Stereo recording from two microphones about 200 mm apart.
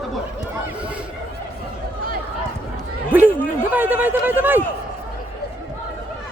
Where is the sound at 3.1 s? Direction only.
10° right (ahead or behind).